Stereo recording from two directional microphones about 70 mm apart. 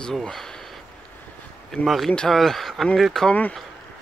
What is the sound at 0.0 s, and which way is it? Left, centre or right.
Speech, centre.